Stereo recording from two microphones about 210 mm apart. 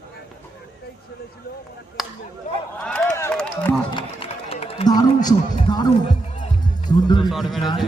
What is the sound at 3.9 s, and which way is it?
Run, 25° left (ahead or behind).